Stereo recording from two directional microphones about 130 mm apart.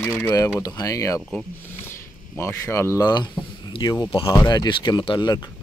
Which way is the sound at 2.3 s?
20° left (ahead or behind).